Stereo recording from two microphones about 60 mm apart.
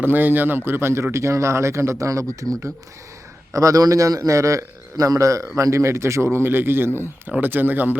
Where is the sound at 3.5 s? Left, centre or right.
Right.